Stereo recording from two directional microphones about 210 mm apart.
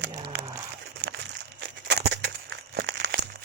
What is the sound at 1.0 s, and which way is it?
Crumpling, 55° right (ahead or behind).